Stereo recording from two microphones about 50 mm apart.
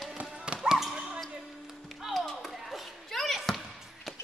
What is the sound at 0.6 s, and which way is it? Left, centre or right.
Basketball bounce, centre.